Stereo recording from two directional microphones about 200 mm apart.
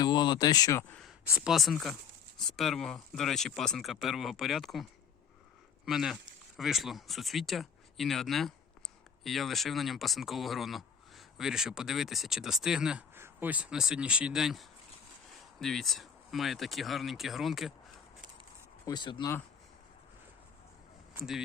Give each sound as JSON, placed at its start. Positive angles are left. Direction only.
{"t": 0.0, "sound": "speech", "side_deg": 20}
{"t": 18.9, "sound": "speech", "side_deg": 20}
{"t": 21.2, "sound": "speech", "side_deg": 0}